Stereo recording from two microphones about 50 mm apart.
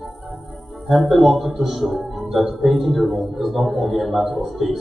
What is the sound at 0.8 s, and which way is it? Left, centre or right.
Speech, centre.